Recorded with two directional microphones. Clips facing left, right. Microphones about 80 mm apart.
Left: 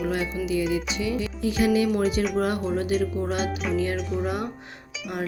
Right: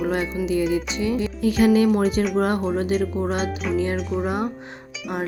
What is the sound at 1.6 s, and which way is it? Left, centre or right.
Speech, right.